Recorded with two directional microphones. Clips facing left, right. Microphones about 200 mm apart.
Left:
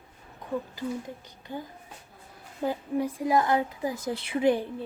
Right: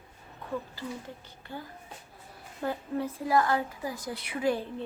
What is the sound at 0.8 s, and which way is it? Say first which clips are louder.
A woman's voice: left 5 dB; 15° left (ahead or behind).